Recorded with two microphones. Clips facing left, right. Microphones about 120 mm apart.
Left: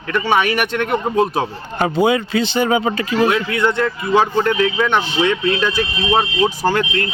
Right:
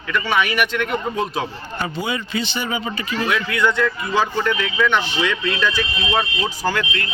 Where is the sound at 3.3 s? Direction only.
30° left (ahead or behind).